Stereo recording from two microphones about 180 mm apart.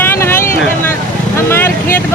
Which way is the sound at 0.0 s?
15° left (ahead or behind).